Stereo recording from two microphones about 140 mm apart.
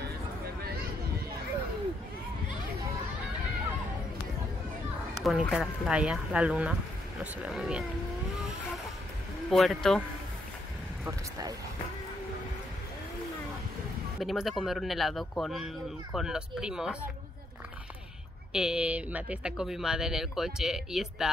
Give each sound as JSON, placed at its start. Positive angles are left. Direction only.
{"t": 5.2, "sound": "speech", "side_deg": 0}
{"t": 9.5, "sound": "speech", "side_deg": 0}
{"t": 11.1, "sound": "speech", "side_deg": -25}
{"t": 14.2, "sound": "speech", "side_deg": 0}
{"t": 18.5, "sound": "speech", "side_deg": -5}